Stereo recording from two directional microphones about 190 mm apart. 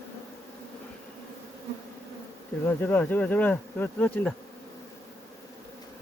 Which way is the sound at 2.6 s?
10° left (ahead or behind).